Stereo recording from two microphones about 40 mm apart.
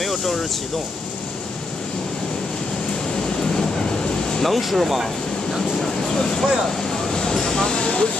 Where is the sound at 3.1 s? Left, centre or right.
Centre.